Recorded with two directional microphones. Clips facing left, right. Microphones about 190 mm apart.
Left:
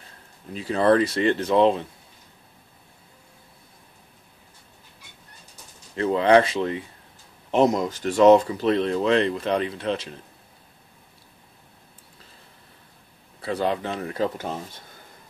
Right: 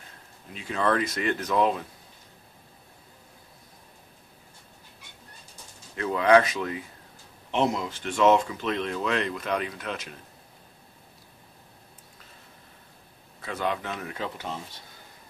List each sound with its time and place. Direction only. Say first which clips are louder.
0.5 s speech: left 7 dB; 35° left (ahead or behind)
5.9 s speech: left 3 dB; 30° left (ahead or behind)
7.5 s speech: left 6 dB; 40° left (ahead or behind)
13.4 s speech: left 5 dB; 35° left (ahead or behind)